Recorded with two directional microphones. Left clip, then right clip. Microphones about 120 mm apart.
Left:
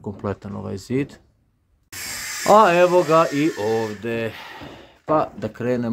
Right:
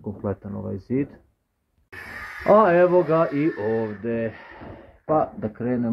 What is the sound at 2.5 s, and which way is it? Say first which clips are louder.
Speech: left 2 dB; 25° left (ahead or behind).